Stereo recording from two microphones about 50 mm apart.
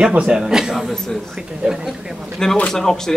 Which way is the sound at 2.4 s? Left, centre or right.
Centre.